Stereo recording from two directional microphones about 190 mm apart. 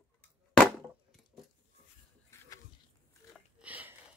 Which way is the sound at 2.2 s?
15° left (ahead or behind).